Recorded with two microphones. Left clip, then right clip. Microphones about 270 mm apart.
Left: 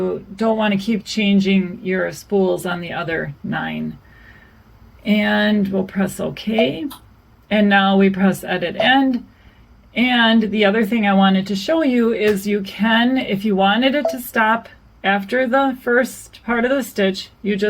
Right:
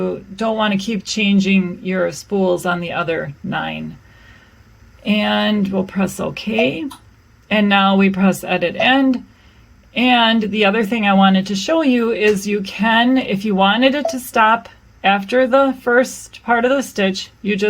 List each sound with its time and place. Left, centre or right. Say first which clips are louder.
0.5 s speech: right 3 dB; right
5.0 s speech: even; right